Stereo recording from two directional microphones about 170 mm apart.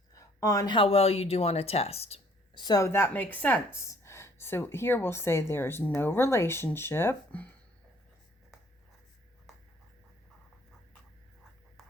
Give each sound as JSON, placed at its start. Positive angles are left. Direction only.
{"t": 0.1, "sound": "speech", "side_deg": 20}
{"t": 2.6, "sound": "a woman's voice", "side_deg": 20}